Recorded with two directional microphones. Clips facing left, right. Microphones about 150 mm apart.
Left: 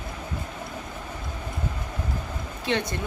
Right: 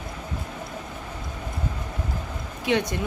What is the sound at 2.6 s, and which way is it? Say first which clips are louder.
Speech: right 3 dB; 15° right (ahead or behind).